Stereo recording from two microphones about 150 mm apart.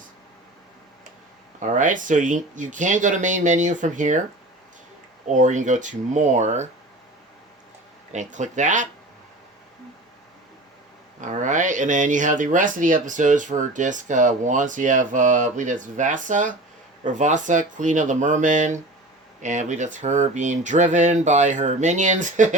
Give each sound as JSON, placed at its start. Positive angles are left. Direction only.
{"t": 1.5, "sound": "speech", "side_deg": -55}
{"t": 5.3, "sound": "speech", "side_deg": -55}
{"t": 8.1, "sound": "speech", "side_deg": -55}
{"t": 11.3, "sound": "speech", "side_deg": -55}